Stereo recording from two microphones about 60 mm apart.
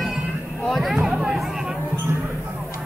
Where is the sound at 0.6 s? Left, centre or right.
Centre.